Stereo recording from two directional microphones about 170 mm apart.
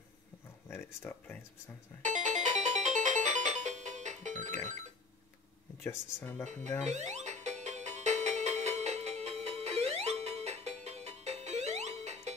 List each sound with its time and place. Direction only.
0.7 s speech: 15° left (ahead or behind)
2.0 s music: 45° right (ahead or behind)
5.9 s speech: 10° left (ahead or behind)
6.4 s speech: 45° right (ahead or behind)
6.8 s music: 40° right (ahead or behind)